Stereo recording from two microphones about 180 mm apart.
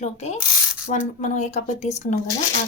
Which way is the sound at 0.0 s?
40° left (ahead or behind).